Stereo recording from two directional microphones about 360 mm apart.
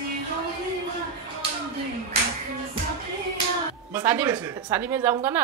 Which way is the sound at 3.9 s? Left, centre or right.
Centre.